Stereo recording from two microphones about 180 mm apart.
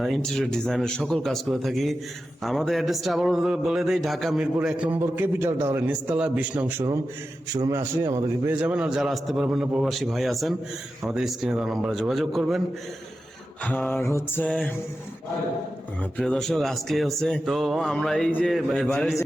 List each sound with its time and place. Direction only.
0.0 s a man's voice: centre (ahead or behind)
13.7 s mantra: 10° left (ahead or behind)
16.1 s speech: centre (ahead or behind)